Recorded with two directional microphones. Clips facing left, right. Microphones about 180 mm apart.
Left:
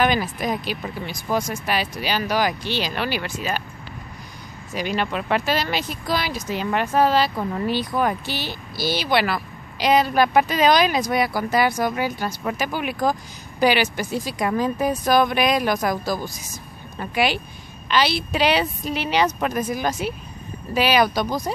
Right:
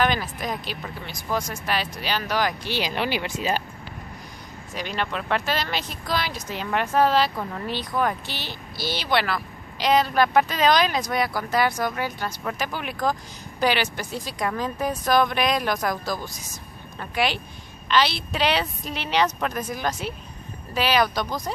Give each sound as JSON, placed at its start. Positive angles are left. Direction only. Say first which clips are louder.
{"t": 0.0, "sound": "speech", "louder": "left 3 dB", "side_deg": 10}
{"t": 2.6, "sound": "speech", "louder": "left 1 dB", "side_deg": -15}
{"t": 4.7, "sound": "speech", "louder": "left 4 dB", "side_deg": 5}